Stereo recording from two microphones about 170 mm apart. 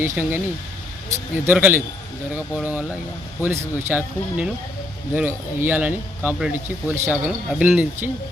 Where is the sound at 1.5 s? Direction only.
10° right (ahead or behind).